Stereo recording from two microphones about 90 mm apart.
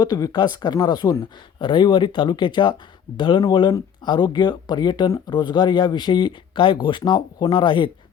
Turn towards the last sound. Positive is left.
turn(degrees=65)  # may be behind; listen again after turning